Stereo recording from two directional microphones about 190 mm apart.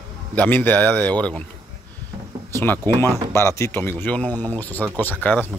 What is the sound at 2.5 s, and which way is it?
Speech, 10° left (ahead or behind).